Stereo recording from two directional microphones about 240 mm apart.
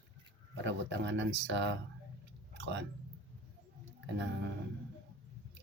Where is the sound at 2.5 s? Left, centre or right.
Right.